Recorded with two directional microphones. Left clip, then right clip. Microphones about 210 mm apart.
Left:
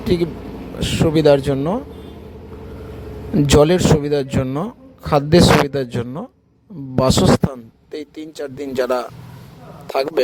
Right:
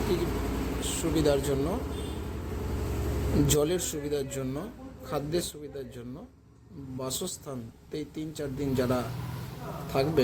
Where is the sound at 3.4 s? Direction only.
40° left (ahead or behind).